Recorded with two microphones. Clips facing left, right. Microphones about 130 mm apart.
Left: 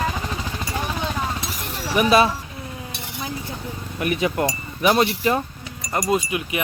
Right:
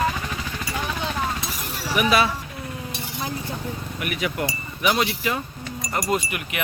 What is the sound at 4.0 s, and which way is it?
Speech, 30° left (ahead or behind).